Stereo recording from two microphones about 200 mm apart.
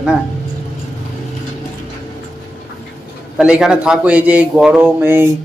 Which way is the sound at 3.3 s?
5° right (ahead or behind).